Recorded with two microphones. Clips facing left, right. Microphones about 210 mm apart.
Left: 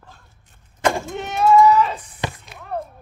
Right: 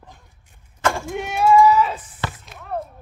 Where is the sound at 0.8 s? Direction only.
20° left (ahead or behind).